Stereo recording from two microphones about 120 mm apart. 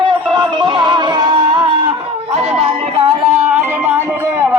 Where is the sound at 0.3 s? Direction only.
40° right (ahead or behind).